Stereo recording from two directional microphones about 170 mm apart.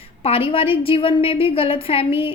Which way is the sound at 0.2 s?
35° left (ahead or behind).